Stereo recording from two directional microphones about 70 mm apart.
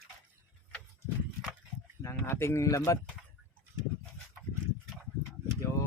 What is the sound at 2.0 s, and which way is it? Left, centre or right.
Speech, left.